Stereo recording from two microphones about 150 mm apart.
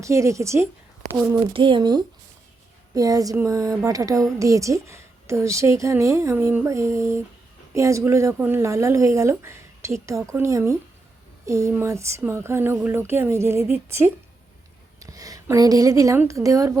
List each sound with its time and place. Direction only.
0.0 s a woman's voice: 20° right (ahead or behind)
1.5 s a woman's voice: 30° right (ahead or behind)
14.9 s a woman's voice: 25° right (ahead or behind)